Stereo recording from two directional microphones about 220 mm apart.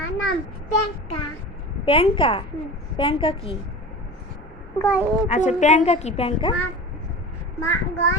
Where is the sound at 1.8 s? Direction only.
25° left (ahead or behind).